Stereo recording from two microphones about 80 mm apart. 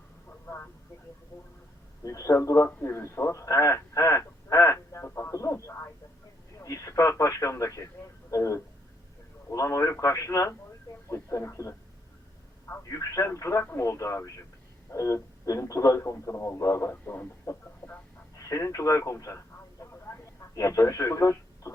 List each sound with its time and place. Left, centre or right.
0.3 s vehicle: left
2.0 s speech: left
2.6 s speech: left
16.9 s speech: left
17.4 s speech: left
19.8 s vehicle: left
20.6 s speech: left